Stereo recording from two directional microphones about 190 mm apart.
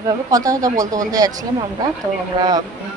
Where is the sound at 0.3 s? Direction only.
20° right (ahead or behind).